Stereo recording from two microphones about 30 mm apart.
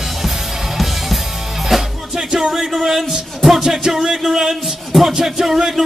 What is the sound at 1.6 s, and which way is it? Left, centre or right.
Music, centre.